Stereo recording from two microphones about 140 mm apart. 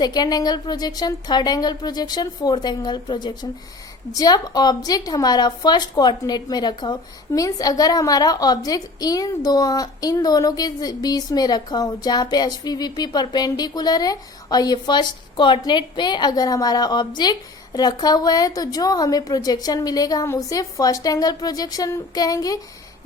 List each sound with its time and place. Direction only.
0.0 s a woman's voice: 30° left (ahead or behind)